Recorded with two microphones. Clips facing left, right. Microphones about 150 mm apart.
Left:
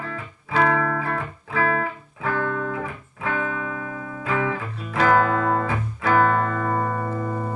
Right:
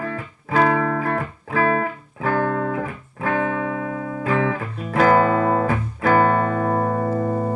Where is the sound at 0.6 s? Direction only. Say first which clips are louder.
Right 1 dB; 30° right (ahead or behind).